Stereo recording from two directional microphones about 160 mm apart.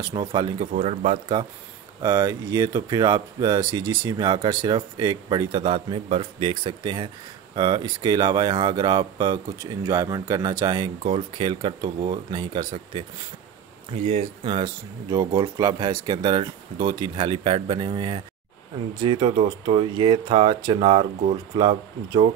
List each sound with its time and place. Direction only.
0.0 s speech: 25° right (ahead or behind)
0.7 s speech: 50° right (ahead or behind)
1.3 s speech: 25° right (ahead or behind)
14.0 s speech: 35° right (ahead or behind)